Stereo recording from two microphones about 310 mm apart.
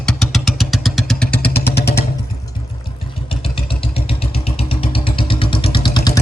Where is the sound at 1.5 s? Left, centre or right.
Left.